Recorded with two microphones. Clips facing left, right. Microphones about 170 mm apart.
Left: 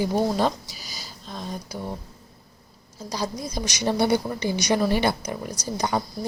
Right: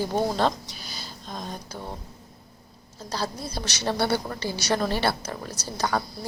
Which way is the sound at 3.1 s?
15° left (ahead or behind).